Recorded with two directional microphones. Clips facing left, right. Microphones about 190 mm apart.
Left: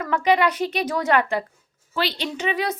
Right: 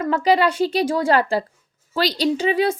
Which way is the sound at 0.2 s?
30° right (ahead or behind).